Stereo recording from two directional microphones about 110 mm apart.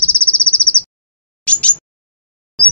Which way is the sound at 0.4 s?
10° left (ahead or behind).